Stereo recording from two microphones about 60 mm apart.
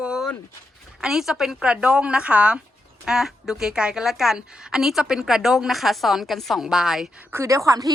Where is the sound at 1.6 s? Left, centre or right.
Centre.